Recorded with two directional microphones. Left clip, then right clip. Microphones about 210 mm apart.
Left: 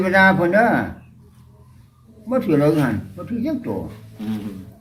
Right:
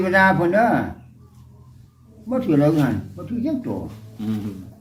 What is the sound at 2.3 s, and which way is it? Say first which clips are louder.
A man's voice: left 1 dB; 5° left (ahead or behind).